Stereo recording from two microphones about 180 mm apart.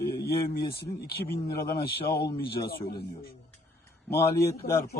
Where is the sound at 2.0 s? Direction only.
60° left (ahead or behind).